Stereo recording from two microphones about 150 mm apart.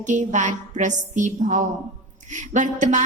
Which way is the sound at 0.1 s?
55° right (ahead or behind).